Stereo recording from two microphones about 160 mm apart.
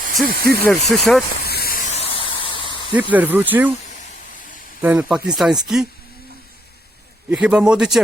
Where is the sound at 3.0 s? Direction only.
10° right (ahead or behind).